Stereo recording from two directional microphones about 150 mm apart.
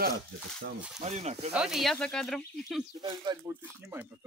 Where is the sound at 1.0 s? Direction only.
50° right (ahead or behind).